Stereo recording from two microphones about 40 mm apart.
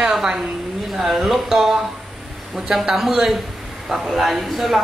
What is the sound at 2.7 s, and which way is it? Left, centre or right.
Speech, centre.